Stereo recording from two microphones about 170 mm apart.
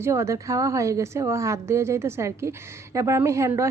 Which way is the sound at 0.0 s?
15° right (ahead or behind).